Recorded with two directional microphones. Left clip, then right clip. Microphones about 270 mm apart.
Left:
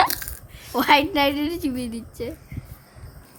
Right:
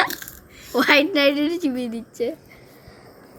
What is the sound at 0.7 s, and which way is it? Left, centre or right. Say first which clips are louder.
A woman's voice: right 1 dB; centre.